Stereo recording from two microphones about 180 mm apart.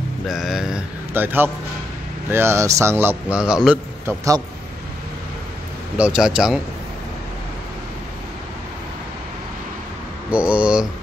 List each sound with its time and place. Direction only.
0.3 s a man's voice: centre (ahead or behind)
4.0 s a man's voice: 20° right (ahead or behind)
5.9 s a man's voice: 5° right (ahead or behind)
10.3 s a man's voice: 5° right (ahead or behind)